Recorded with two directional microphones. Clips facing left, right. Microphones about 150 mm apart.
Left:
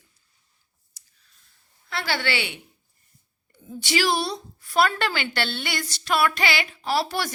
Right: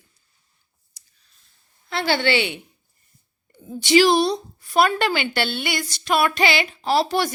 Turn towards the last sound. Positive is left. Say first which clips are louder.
# right 5 dB
turn(degrees=-20)  # may be behind; listen again after turning